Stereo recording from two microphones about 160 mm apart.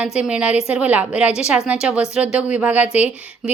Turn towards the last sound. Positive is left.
turn(degrees=-10)  # may be behind; listen again after turning